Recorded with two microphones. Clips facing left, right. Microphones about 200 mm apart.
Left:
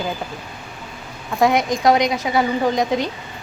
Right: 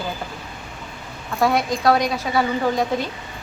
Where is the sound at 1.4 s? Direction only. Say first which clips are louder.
Left 2 dB; 20° left (ahead or behind).